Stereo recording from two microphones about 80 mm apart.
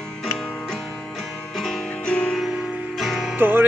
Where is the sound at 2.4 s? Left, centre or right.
Centre.